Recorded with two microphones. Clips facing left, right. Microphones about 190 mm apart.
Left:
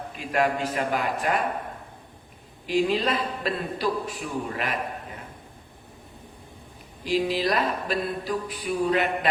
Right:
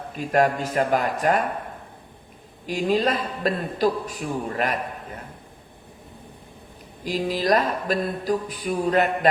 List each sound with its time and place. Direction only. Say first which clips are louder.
0.1 s speech: right 4 dB; 45° right (ahead or behind)
2.6 s speech: right 1 dB; 45° right (ahead or behind)
7.0 s speech: even; 45° right (ahead or behind)